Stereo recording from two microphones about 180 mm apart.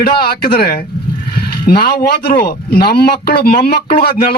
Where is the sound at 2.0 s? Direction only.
60° left (ahead or behind).